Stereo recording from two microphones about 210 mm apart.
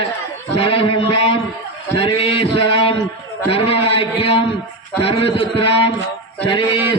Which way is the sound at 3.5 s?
25° left (ahead or behind).